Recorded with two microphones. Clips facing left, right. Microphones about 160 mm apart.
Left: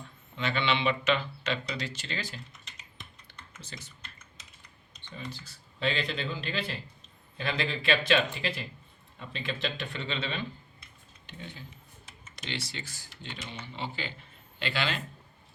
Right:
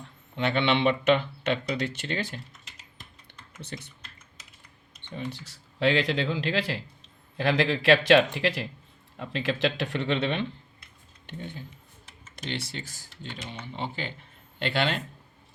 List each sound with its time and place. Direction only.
0.3 s speech: 60° right (ahead or behind)
3.6 s speech: 60° right (ahead or behind)
5.0 s speech: 65° right (ahead or behind); by 6.8 s 90° right
7.3 s speech: 80° right; by 10.4 s 60° right (ahead or behind)
11.3 s speech: 50° right (ahead or behind)